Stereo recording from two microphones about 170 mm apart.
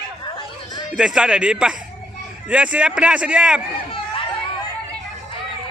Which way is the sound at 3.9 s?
30° left (ahead or behind).